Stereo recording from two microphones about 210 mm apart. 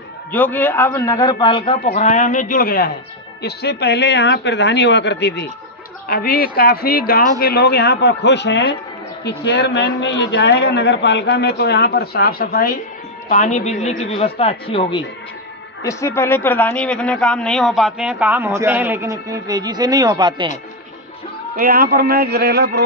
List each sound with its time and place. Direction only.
0.3 s a man's voice: 10° left (ahead or behind)
2.0 s a man's voice: 35° left (ahead or behind); by 20.5 s 20° right (ahead or behind)
21.5 s a man's voice: 45° right (ahead or behind)